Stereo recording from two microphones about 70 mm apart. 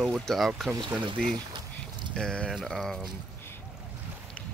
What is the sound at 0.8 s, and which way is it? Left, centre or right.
Speech, right.